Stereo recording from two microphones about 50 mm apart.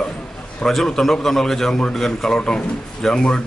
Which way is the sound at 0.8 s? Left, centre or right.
Centre.